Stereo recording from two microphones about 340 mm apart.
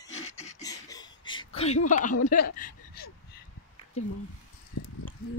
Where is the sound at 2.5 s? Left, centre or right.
Left.